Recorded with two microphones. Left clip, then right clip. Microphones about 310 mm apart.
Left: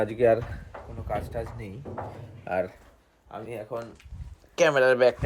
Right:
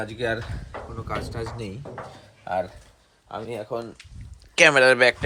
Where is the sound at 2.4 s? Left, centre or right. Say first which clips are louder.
Right 2 dB; right.